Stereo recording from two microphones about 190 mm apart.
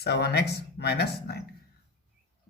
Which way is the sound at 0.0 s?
60° left (ahead or behind).